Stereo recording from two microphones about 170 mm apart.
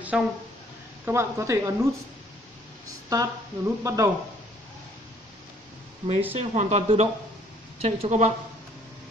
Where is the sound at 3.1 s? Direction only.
20° right (ahead or behind).